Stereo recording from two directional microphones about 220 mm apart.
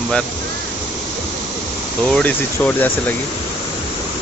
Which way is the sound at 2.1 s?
5° left (ahead or behind).